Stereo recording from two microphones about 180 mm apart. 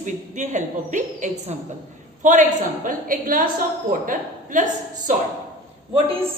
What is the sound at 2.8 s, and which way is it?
A woman's voice, 50° right (ahead or behind).